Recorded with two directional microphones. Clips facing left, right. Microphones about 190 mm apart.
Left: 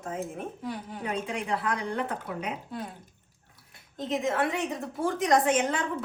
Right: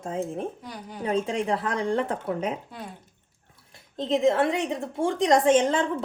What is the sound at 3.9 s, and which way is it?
Speech, 30° right (ahead or behind).